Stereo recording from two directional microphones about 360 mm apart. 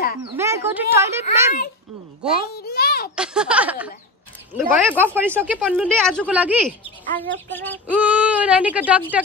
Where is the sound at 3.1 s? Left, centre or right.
Centre.